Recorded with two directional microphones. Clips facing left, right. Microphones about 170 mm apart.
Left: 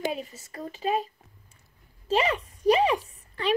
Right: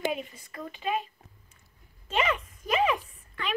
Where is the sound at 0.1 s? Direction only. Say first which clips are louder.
Even; 40° left (ahead or behind).